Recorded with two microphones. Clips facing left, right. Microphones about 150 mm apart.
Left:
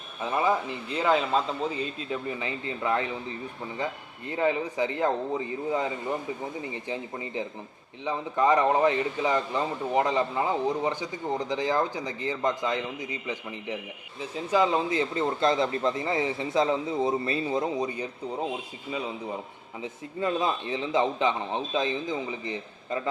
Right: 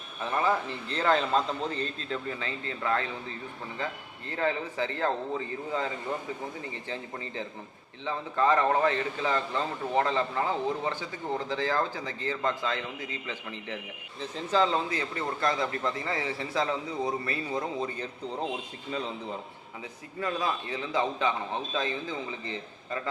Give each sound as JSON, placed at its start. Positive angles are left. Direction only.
{"t": 0.2, "sound": "a man's voice", "side_deg": 15}
{"t": 19.8, "sound": "a man's voice", "side_deg": 25}